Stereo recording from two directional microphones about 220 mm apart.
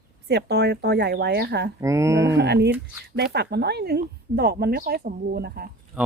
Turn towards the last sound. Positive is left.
turn(degrees=-5)  # may be behind; listen again after turning